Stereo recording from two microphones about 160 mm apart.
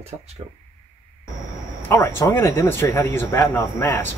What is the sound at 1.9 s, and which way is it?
Speech, 15° left (ahead or behind).